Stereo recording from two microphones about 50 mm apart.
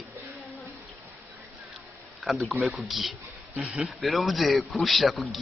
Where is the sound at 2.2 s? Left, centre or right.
Centre.